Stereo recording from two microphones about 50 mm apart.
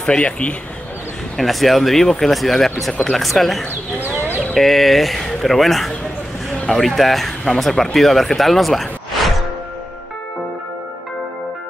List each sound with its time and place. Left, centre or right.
0.2 s a man's voice: left
1.3 s speech: centre